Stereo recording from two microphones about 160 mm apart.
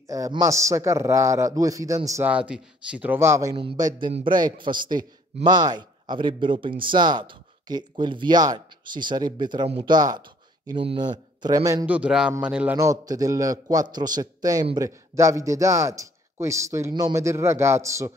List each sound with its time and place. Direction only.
0.1 s a man's voice: 20° right (ahead or behind)
2.3 s speech: 5° right (ahead or behind)
3.5 s a man's voice: 30° right (ahead or behind)
11.8 s speech: 10° right (ahead or behind)
12.7 s a man's voice: 20° right (ahead or behind)